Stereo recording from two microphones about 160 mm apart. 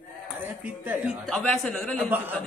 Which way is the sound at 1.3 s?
5° left (ahead or behind).